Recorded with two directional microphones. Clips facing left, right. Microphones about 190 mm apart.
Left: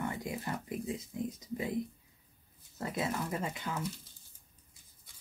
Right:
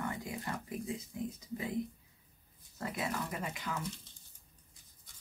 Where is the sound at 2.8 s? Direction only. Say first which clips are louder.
Left 3 dB; 25° left (ahead or behind).